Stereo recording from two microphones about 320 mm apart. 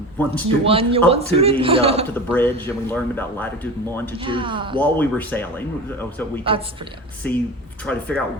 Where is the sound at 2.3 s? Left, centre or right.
Centre.